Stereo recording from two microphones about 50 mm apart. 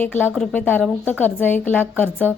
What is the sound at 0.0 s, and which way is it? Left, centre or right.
A woman's voice, left.